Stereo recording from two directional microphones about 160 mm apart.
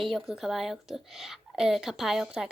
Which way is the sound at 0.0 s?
Centre (ahead or behind).